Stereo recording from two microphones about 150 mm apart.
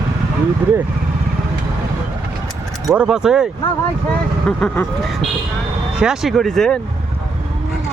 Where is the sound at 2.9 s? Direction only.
5° right (ahead or behind).